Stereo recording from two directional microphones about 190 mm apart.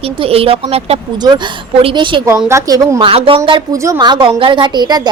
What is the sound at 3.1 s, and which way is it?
A woman's voice, 30° right (ahead or behind).